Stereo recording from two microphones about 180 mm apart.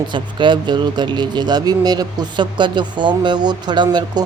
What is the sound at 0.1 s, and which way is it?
Speech, 25° right (ahead or behind).